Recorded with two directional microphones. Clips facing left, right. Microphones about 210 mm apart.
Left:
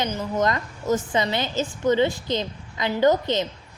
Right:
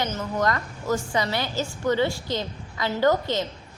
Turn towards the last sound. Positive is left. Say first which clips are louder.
# left 2 dB
turn(degrees=20)  # may be behind; listen again after turning